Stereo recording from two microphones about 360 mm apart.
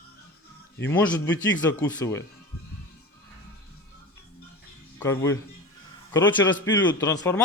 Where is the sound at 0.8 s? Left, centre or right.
Centre.